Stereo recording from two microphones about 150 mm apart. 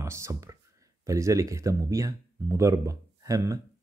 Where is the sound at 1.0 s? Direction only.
20° right (ahead or behind).